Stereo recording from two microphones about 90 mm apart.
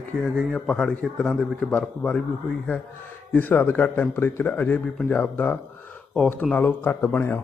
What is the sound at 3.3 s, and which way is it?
Speech, 20° left (ahead or behind).